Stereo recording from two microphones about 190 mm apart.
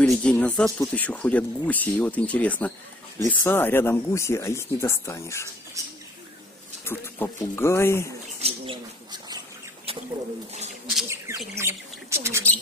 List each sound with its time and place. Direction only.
0.0 s a sound: 5° left (ahead or behind)
0.7 s speech: 5° left (ahead or behind)
5.8 s speech: 15° right (ahead or behind)
6.8 s speech: 10° left (ahead or behind)
8.4 s bird: 30° right (ahead or behind)
9.9 s a sound: 30° right (ahead or behind)
11.1 s bird: 15° right (ahead or behind)